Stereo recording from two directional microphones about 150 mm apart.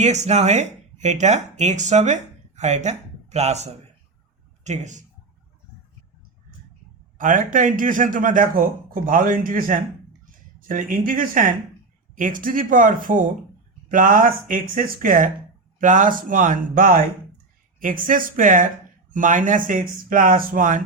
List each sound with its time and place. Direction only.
0.0 s speech: 50° right (ahead or behind)
7.2 s speech: 60° right (ahead or behind)